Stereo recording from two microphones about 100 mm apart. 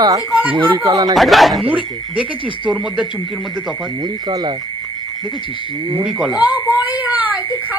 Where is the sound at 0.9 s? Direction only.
40° right (ahead or behind).